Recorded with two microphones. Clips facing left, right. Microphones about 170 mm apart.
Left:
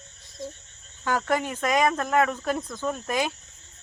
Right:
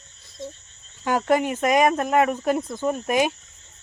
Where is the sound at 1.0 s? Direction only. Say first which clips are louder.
Right 5 dB; 20° right (ahead or behind).